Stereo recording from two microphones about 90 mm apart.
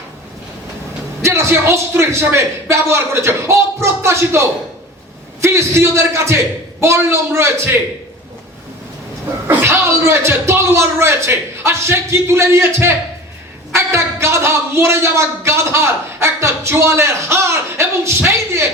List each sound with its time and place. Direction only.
1.2 s speech: 30° right (ahead or behind)
9.5 s speech: 20° right (ahead or behind)